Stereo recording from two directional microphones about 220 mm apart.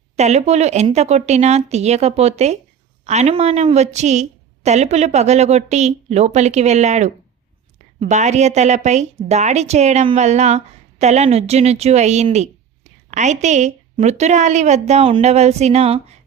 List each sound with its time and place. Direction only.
0.2 s a woman's voice: 30° right (ahead or behind)